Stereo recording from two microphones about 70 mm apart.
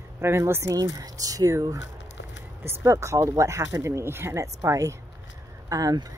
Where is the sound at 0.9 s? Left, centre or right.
Right.